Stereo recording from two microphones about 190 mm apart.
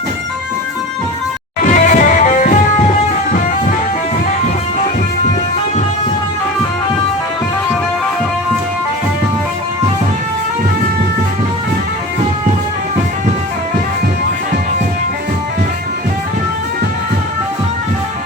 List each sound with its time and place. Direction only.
1.7 s music: 40° left (ahead or behind)